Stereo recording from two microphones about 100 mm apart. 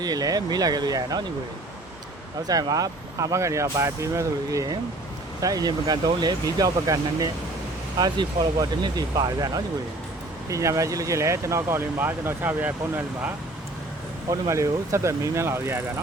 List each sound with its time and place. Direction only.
0.0 s speech: 40° right (ahead or behind)
2.5 s speech: 35° right (ahead or behind); by 13.3 s 20° right (ahead or behind)
14.3 s speech: 30° right (ahead or behind)